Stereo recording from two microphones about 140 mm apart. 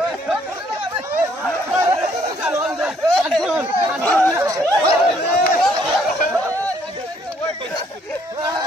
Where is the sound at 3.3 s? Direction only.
Centre (ahead or behind).